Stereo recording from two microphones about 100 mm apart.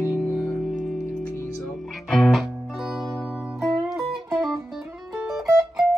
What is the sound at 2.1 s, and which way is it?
Music, centre (ahead or behind).